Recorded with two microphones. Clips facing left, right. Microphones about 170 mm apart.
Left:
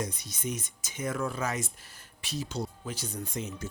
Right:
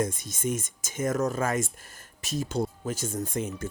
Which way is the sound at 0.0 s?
50° right (ahead or behind).